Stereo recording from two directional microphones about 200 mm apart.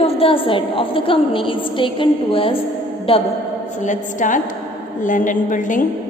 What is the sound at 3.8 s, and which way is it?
A woman's voice, 40° left (ahead or behind).